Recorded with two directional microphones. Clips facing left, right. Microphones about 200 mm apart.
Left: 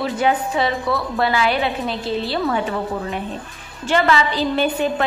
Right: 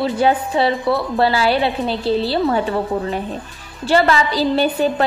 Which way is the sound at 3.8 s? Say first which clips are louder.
Right 2 dB; 35° right (ahead or behind).